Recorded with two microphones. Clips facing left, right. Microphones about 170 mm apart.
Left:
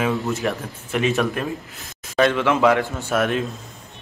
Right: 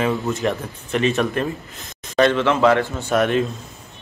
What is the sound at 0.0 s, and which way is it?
Speech, 5° left (ahead or behind).